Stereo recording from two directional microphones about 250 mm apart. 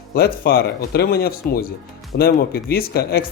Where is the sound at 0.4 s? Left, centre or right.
Left.